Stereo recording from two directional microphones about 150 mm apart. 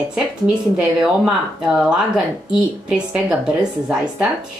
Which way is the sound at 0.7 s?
5° right (ahead or behind).